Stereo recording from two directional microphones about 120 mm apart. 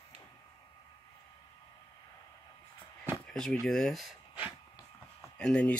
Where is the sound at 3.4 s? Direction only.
5° left (ahead or behind).